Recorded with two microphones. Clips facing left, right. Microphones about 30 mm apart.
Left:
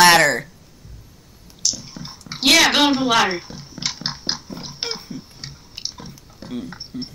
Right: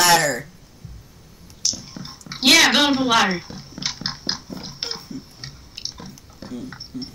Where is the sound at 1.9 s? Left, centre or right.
Left.